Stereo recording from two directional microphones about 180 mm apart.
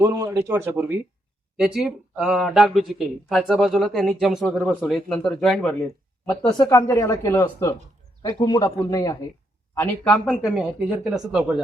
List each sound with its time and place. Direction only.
0.0 s a man's voice: 20° right (ahead or behind); by 5.7 s centre (ahead or behind)
6.6 s speech: 15° left (ahead or behind)
10.2 s a man's voice: 5° right (ahead or behind)